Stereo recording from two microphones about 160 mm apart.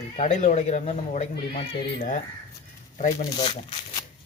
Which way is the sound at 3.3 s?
30° left (ahead or behind).